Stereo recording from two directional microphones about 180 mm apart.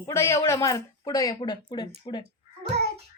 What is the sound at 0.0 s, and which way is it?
Speech, 15° left (ahead or behind).